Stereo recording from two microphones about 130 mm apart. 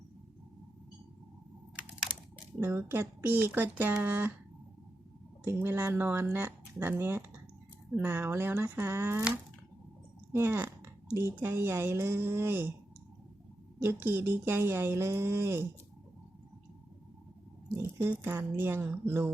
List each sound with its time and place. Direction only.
2.6 s speech: 20° right (ahead or behind)
5.5 s speech: 20° right (ahead or behind)
10.3 s speech: 20° right (ahead or behind)
13.7 s speech: 15° right (ahead or behind)
17.7 s speech: 20° right (ahead or behind)